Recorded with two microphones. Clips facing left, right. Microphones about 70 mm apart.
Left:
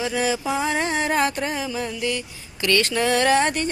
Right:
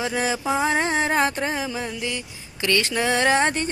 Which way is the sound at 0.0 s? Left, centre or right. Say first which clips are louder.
Left 1 dB; right.